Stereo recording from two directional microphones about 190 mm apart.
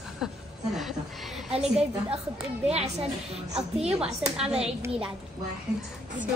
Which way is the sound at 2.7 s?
35° right (ahead or behind).